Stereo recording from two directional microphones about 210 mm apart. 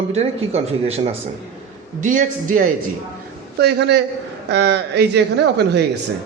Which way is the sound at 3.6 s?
55° right (ahead or behind).